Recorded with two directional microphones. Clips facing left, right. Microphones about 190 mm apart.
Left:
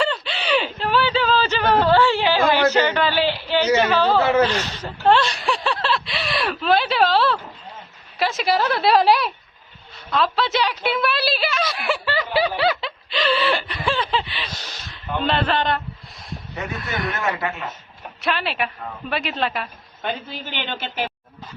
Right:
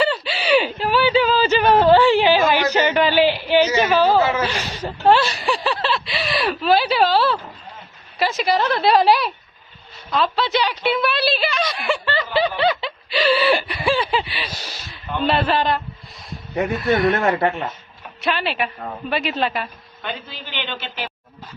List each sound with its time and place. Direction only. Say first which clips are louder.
0.0 s a sound: right 3 dB; 5° right (ahead or behind)
3.8 s speech: right 2 dB; 15° right (ahead or behind)
10.1 s a sound: right 1 dB; centre (ahead or behind)
15.3 s speech: right 2 dB; 5° right (ahead or behind)
18.2 s speech: right 2 dB; centre (ahead or behind)
20.0 s a man's voice: left 3 dB; 45° left (ahead or behind)